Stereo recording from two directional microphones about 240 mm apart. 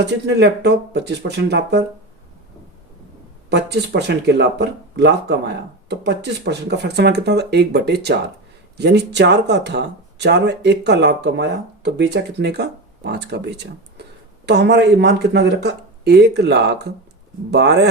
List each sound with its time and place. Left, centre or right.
0.0 s speech: right
3.5 s speech: right